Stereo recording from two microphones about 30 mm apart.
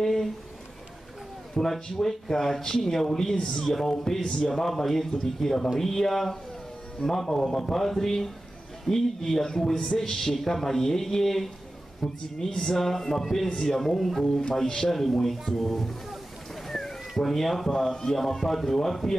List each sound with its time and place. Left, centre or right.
0.0 s a sound: centre
1.5 s speech: centre
4.6 s speech: centre
16.6 s a sound: centre
17.2 s speech: centre
17.7 s speech: centre